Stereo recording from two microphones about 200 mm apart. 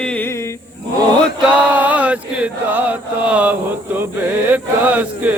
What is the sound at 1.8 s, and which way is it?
Mantra, 10° right (ahead or behind).